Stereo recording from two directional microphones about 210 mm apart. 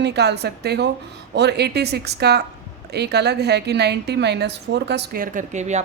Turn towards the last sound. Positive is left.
turn(degrees=-35)  # may be behind; listen again after turning